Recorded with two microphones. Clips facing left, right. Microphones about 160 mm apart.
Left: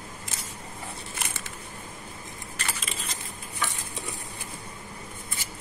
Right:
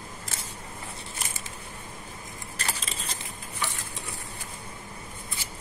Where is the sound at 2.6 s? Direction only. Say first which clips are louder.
Right 1 dB; 35° right (ahead or behind).